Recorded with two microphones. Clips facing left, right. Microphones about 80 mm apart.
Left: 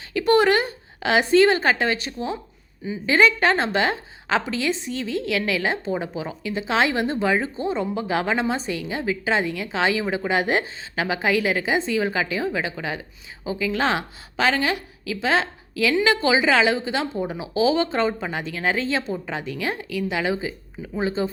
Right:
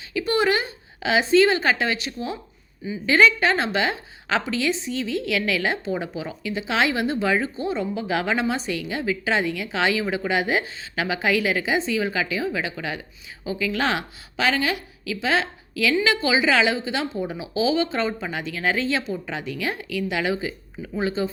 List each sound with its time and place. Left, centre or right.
0.1 s a woman's voice: left